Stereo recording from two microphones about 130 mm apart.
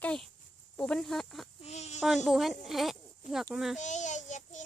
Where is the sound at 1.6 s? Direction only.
60° left (ahead or behind).